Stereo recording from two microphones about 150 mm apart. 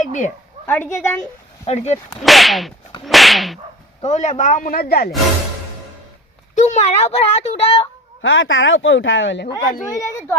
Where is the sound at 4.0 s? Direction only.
50° left (ahead or behind); by 5.1 s 90° left.